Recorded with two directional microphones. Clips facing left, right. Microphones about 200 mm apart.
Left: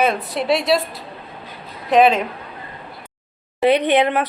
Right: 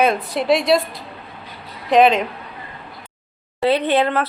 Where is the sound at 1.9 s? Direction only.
5° left (ahead or behind).